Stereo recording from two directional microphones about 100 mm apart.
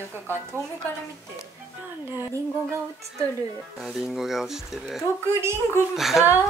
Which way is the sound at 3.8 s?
Centre (ahead or behind).